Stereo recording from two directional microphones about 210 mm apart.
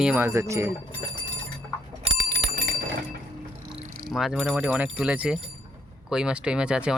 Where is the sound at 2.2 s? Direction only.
50° right (ahead or behind).